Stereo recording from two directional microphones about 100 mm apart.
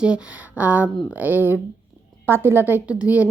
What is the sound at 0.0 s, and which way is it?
A woman's voice, 10° right (ahead or behind).